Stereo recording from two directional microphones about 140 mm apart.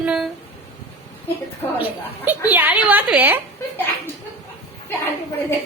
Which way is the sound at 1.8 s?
10° right (ahead or behind).